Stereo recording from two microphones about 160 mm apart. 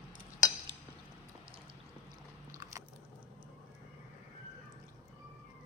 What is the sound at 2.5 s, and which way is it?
Biting, 20° right (ahead or behind).